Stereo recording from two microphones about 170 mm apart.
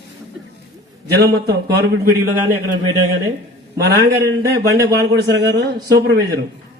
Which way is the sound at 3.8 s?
75° right (ahead or behind).